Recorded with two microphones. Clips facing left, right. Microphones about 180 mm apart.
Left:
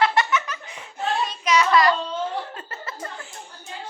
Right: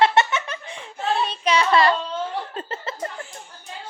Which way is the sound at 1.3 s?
30° right (ahead or behind).